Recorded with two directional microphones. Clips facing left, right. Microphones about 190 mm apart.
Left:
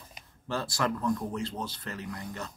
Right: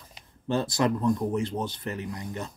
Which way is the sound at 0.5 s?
20° right (ahead or behind).